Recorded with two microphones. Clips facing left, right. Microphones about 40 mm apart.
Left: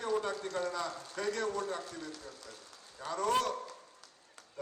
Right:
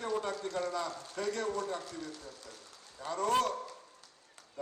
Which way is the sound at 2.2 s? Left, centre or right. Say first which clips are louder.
Even; left.